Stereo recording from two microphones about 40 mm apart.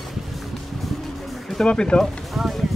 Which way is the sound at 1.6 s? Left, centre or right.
Left.